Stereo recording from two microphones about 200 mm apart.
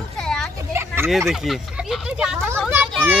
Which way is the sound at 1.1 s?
Centre (ahead or behind).